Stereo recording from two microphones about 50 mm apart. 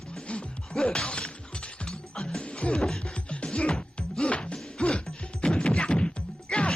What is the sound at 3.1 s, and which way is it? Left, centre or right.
Music, left.